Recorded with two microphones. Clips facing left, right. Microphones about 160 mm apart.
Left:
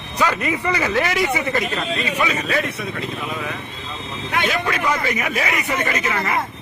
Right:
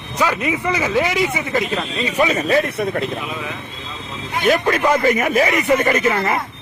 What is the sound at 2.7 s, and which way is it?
Speech, 50° right (ahead or behind).